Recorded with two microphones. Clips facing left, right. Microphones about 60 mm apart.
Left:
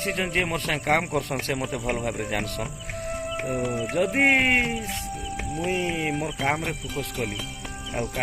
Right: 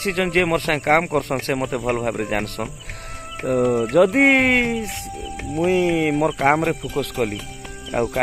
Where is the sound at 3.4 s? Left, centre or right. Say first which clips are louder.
Right 11 dB; right.